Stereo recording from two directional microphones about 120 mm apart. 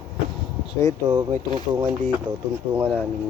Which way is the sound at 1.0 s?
30° right (ahead or behind).